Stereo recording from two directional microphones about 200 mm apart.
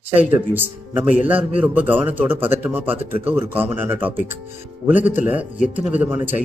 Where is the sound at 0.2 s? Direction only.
10° right (ahead or behind).